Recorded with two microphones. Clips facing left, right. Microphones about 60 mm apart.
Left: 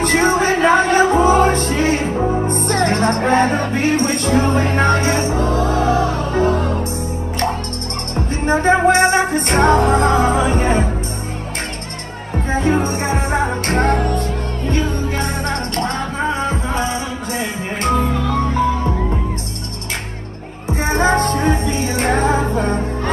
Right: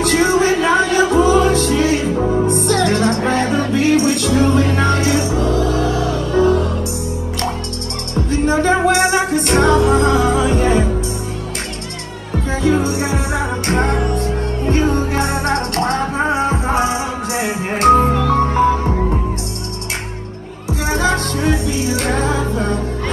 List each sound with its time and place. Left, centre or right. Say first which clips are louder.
0.0 s music: right 1 dB; left
8.1 s music: right 2 dB; left
12.4 s music: right 1 dB; left
14.6 s music: right 4 dB; right
16.2 s music: right 3 dB; right
18.1 s music: right 4 dB; right
18.4 s music: right 3 dB; right
20.6 s music: left 1 dB; left